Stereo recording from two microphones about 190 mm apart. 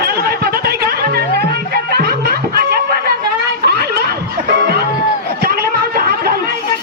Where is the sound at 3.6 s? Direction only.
55° right (ahead or behind).